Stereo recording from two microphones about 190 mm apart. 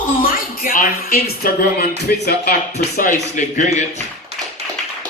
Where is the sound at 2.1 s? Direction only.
50° left (ahead or behind).